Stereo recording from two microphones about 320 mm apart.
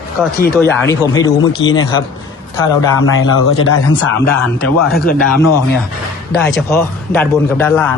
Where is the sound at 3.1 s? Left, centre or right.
Left.